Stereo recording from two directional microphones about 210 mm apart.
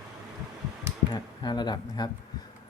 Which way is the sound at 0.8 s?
20° left (ahead or behind).